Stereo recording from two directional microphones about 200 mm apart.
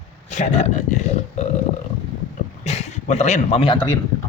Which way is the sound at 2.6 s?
35° left (ahead or behind).